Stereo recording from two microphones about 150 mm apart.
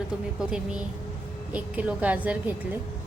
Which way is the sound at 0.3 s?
5° right (ahead or behind).